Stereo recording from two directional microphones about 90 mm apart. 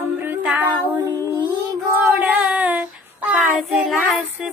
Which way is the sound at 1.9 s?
20° right (ahead or behind).